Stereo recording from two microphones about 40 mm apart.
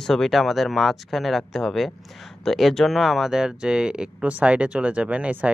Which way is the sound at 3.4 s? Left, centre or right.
Right.